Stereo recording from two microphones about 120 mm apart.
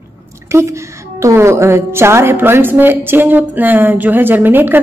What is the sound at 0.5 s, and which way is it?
A woman's voice, 25° right (ahead or behind).